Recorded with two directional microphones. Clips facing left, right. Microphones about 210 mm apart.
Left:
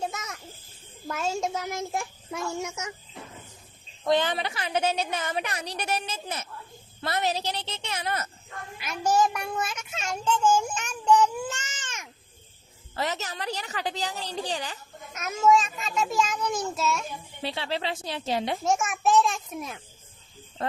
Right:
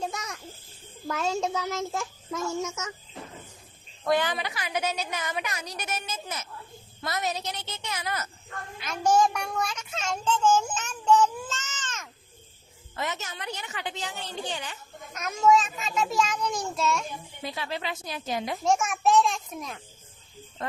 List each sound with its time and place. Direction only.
0.1 s a sound: 5° left (ahead or behind)
1.0 s a child's voice: 10° left (ahead or behind)
4.0 s a woman's voice: 20° left (ahead or behind)
8.8 s a child's voice: 5° left (ahead or behind)
13.0 s a woman's voice: 35° left (ahead or behind)
15.1 s a child's voice: 5° left (ahead or behind)
17.4 s a woman's voice: 30° left (ahead or behind)
18.6 s a child's voice: centre (ahead or behind)
20.6 s speech: 30° left (ahead or behind)